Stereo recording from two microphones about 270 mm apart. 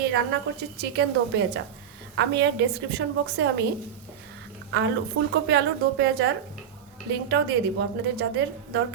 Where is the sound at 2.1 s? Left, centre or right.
Right.